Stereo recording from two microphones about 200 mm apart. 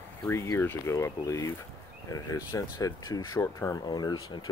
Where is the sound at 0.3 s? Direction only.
15° left (ahead or behind).